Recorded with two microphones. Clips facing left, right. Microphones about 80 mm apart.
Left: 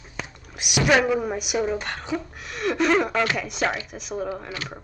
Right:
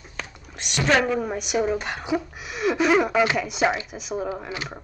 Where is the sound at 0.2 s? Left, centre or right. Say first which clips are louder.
Left 1 dB; centre.